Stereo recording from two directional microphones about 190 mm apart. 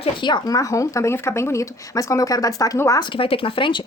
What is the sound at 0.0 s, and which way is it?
Speech, 25° left (ahead or behind).